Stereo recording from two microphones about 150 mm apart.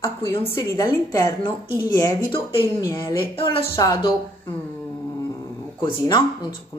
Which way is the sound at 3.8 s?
30° left (ahead or behind).